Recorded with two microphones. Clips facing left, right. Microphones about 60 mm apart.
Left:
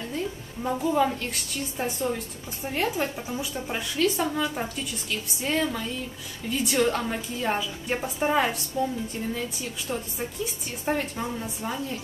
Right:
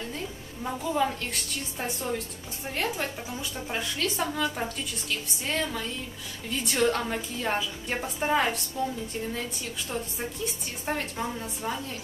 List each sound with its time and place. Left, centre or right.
0.7 s speech: centre
9.8 s speech: centre